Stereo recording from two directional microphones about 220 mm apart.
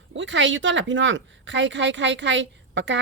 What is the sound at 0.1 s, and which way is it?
Speech, 55° right (ahead or behind).